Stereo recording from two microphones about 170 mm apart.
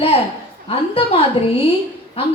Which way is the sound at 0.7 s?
35° left (ahead or behind).